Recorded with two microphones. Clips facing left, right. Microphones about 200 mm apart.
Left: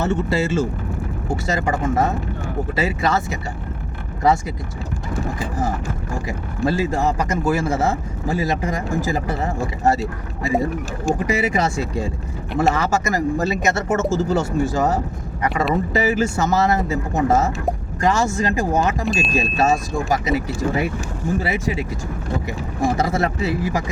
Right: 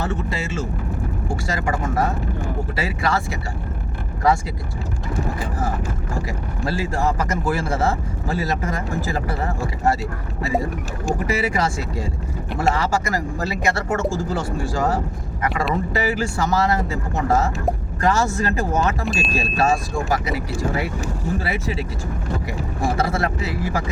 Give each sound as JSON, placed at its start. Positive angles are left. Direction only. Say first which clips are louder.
{"t": 0.0, "sound": "speech", "louder": "left 6 dB", "side_deg": 30}
{"t": 1.3, "sound": "speech", "louder": "left 4 dB", "side_deg": 20}
{"t": 6.2, "sound": "speech", "louder": "left 4 dB", "side_deg": 20}
{"t": 19.0, "sound": "speech", "louder": "left 2 dB", "side_deg": 0}
{"t": 19.3, "sound": "speech", "louder": "left 1 dB", "side_deg": 20}